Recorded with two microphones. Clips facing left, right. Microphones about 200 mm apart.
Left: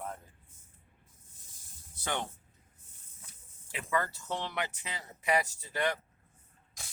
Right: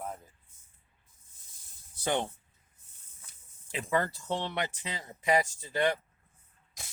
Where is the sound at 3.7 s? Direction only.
30° right (ahead or behind).